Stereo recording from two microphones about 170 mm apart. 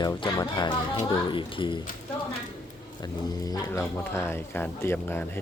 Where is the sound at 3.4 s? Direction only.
20° left (ahead or behind).